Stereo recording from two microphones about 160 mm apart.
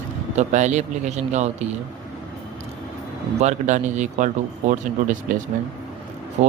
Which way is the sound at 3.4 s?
50° right (ahead or behind).